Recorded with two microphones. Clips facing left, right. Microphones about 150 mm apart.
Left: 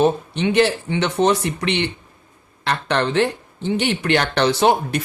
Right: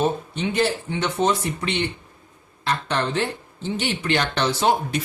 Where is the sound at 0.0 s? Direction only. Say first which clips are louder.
Left 5 dB; 75° left (ahead or behind).